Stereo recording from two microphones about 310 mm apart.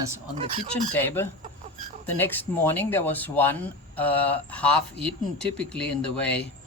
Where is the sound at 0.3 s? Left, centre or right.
Right.